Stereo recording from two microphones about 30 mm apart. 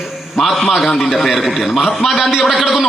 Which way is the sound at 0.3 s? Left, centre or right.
Centre.